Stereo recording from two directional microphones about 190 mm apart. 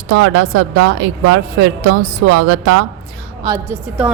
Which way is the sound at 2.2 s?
90° right.